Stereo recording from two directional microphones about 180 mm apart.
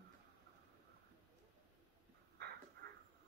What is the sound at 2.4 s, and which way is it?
Crow, 65° right (ahead or behind).